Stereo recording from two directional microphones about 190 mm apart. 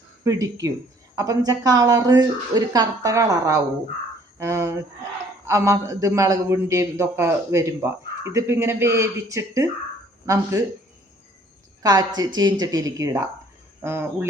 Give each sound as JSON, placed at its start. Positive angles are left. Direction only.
{"t": 0.3, "sound": "a man's voice", "side_deg": -20}
{"t": 11.8, "sound": "a man's voice", "side_deg": -20}